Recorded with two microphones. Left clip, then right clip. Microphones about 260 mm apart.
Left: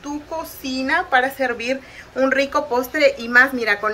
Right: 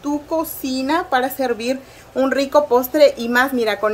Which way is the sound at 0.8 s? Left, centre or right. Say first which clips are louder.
Left 1 dB; right.